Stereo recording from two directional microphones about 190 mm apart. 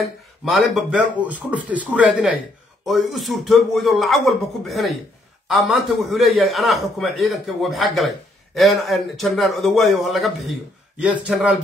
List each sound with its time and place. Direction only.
0.0 s a man's voice: centre (ahead or behind)